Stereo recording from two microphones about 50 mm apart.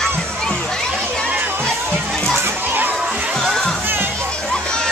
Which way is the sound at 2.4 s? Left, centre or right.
Right.